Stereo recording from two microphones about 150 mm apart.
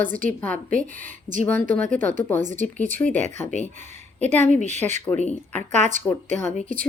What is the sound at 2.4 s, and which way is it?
Speech, 55° right (ahead or behind).